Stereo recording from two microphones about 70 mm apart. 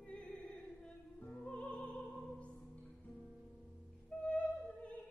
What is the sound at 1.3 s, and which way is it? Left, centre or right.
Music, centre.